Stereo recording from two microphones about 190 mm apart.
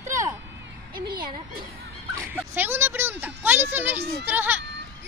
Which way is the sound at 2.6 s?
10° right (ahead or behind).